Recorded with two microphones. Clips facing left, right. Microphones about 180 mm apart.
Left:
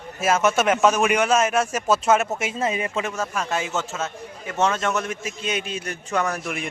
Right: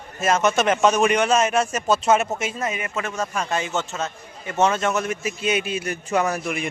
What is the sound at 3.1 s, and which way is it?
A man's voice, centre (ahead or behind).